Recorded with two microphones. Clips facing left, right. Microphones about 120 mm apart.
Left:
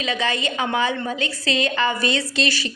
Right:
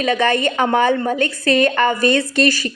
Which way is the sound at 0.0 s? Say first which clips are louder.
Right 7 dB; 55° right (ahead or behind).